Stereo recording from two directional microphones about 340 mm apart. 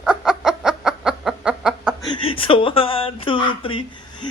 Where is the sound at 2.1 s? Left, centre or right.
Centre.